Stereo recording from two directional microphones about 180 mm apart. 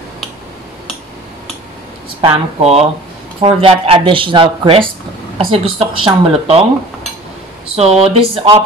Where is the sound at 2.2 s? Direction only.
35° right (ahead or behind).